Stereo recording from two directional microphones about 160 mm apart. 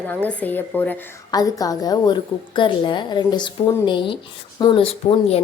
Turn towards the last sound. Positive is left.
turn(degrees=35)  # may be behind; listen again after turning